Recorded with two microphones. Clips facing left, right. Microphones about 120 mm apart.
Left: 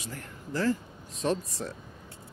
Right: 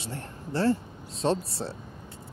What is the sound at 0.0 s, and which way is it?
Speech, 30° right (ahead or behind).